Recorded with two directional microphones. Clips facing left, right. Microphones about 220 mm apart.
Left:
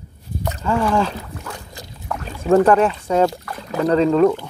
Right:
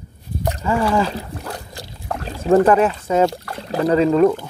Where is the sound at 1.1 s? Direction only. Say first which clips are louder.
Right 3 dB; 35° right (ahead or behind).